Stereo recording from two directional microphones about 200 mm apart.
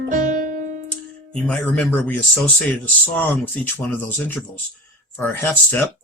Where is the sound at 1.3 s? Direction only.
5° left (ahead or behind).